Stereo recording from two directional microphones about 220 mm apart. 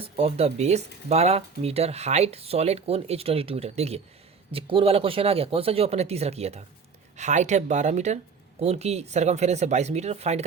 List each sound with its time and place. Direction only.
0.0 s speech: 25° right (ahead or behind)